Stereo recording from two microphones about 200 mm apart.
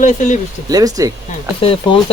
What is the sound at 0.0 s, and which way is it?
Speech, 40° left (ahead or behind).